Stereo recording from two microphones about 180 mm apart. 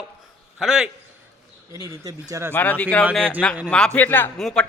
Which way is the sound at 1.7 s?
15° right (ahead or behind).